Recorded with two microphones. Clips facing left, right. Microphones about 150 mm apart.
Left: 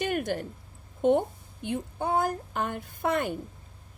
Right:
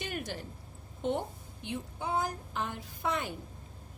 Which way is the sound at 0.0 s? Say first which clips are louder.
Left 9 dB; 55° left (ahead or behind).